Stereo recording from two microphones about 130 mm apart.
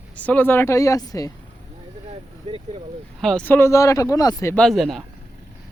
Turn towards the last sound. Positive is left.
turn(degrees=0)  # may be behind; listen again after turning